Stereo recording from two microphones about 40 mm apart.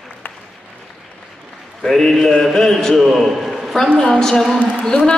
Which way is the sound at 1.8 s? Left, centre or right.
Centre.